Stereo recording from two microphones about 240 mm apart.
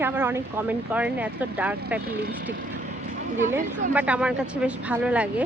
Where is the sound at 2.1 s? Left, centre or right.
Right.